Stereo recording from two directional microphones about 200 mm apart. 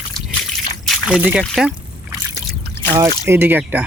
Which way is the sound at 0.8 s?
Centre (ahead or behind).